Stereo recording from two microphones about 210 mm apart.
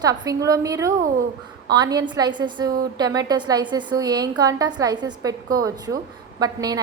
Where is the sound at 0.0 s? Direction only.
15° right (ahead or behind).